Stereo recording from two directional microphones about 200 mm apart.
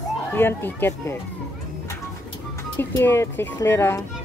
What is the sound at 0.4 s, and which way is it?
Speech, 10° left (ahead or behind).